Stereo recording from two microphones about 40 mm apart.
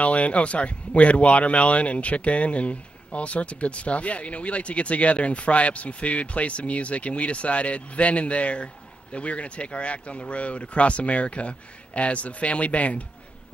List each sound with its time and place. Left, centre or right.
0.0 s speech: left